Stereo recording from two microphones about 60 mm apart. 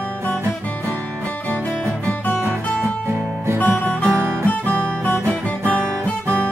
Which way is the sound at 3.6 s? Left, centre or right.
Left.